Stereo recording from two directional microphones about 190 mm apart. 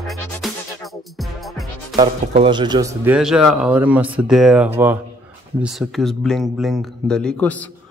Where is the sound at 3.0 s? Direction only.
5° right (ahead or behind).